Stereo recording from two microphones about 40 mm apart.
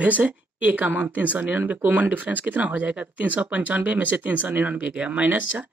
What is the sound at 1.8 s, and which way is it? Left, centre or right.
Speech, right.